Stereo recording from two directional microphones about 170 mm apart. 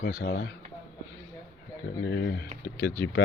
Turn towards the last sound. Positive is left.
turn(degrees=60)  # may be behind; listen again after turning